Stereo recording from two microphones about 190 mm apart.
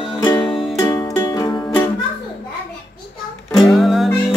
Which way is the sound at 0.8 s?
15° left (ahead or behind).